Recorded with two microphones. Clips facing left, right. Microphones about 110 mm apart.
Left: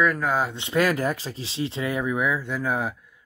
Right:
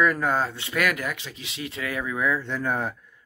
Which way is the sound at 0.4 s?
20° left (ahead or behind).